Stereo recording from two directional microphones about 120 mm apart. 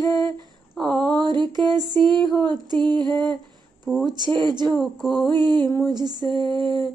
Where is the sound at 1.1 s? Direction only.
35° right (ahead or behind).